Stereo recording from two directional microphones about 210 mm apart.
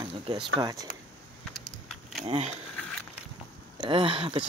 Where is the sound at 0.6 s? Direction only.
15° right (ahead or behind).